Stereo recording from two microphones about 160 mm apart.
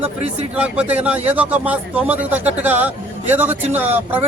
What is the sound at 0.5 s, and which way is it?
A man's voice, 10° right (ahead or behind).